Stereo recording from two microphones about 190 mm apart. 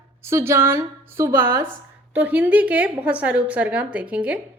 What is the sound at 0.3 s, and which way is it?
A woman's voice, 15° right (ahead or behind).